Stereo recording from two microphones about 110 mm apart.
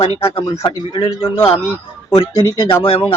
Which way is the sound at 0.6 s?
30° left (ahead or behind).